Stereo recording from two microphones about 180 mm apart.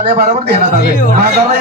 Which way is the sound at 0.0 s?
50° right (ahead or behind).